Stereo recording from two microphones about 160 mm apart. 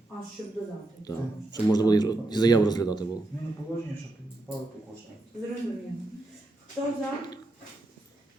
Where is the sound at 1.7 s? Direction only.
25° left (ahead or behind).